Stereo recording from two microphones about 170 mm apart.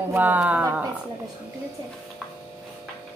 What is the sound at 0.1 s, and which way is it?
Speech, 10° right (ahead or behind).